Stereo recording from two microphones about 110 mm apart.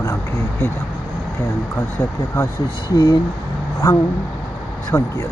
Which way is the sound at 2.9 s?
40° left (ahead or behind).